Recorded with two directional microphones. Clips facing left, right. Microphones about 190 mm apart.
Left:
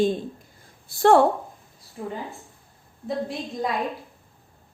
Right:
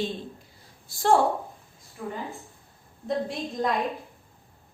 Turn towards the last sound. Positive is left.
turn(degrees=5)  # may be behind; listen again after turning